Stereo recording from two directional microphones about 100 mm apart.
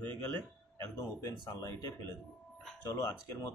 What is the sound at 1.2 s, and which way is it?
Speech, 40° left (ahead or behind).